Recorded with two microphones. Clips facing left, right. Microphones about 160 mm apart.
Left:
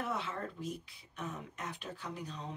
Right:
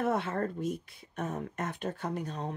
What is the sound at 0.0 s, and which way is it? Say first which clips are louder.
Speech: right 8 dB; 55° right (ahead or behind).